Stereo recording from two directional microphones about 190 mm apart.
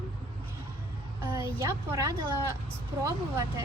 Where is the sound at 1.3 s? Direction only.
15° right (ahead or behind).